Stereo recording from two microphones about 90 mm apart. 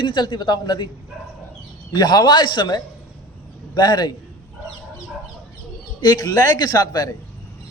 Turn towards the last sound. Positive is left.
turn(degrees=45)  # may be behind; listen again after turning